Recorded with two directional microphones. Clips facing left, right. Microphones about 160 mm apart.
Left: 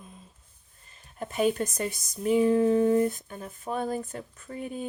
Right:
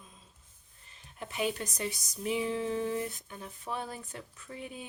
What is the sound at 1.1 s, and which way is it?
Speech, 45° left (ahead or behind).